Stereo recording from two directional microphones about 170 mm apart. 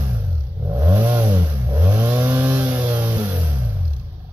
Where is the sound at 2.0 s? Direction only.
10° right (ahead or behind).